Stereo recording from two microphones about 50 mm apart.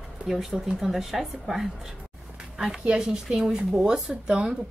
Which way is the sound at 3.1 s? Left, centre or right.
Centre.